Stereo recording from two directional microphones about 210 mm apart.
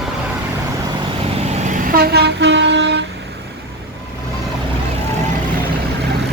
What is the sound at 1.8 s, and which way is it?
Train, 45° right (ahead or behind).